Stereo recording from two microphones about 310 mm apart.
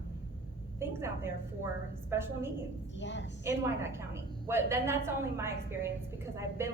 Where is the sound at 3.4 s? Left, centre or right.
Centre.